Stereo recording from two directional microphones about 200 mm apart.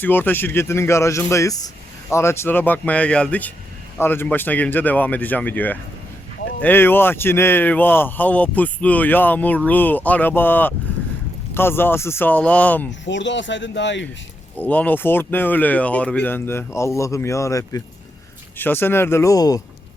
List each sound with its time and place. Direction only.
0.0 s speech: 10° left (ahead or behind)
12.9 s speech: 65° left (ahead or behind)
14.6 s speech: 10° left (ahead or behind)